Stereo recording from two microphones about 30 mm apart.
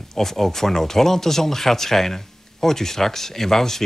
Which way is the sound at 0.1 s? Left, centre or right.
Centre.